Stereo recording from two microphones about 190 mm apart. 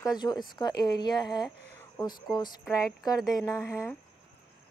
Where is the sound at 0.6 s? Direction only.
20° left (ahead or behind).